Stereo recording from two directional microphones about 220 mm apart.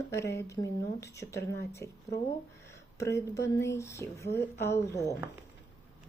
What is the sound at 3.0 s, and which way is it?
Speech, 15° left (ahead or behind).